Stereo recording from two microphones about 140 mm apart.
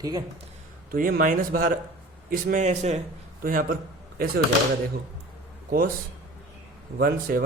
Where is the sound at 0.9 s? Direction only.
90° right; by 3.0 s 55° right (ahead or behind).